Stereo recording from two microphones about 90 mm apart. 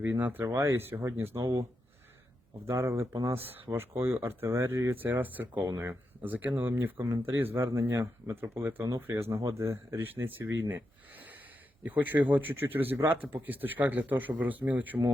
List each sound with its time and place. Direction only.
0.0 s speech: 20° right (ahead or behind)
0.4 s speech: 35° right (ahead or behind)
2.6 s speech: 30° right (ahead or behind)
5.5 s speech: 40° right (ahead or behind)
5.9 s speech: 20° right (ahead or behind)
9.4 s speech: 35° right (ahead or behind); by 15.1 s 20° right (ahead or behind)